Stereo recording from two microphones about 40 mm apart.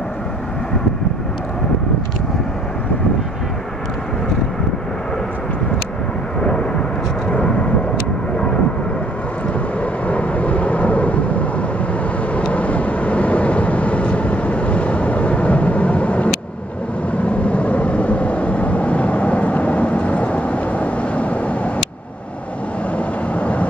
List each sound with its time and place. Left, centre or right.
7.2 s vehicle: left
9.5 s vehicle: left
22.9 s vehicle: left